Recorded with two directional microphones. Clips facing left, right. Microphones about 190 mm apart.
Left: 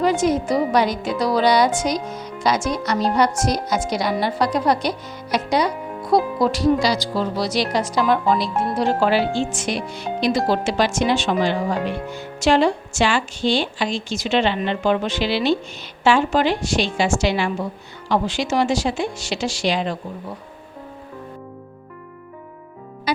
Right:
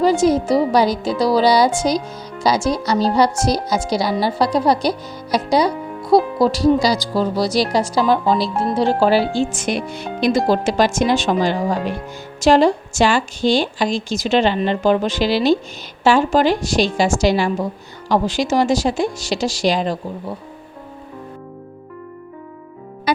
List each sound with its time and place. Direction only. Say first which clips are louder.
0.0 s speech: right 4 dB; 35° right (ahead or behind)
23.1 s music: right 3 dB; 50° right (ahead or behind)